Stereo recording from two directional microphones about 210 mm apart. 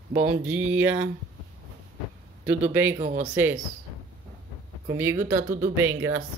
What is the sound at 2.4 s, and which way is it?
Speech, 10° right (ahead or behind).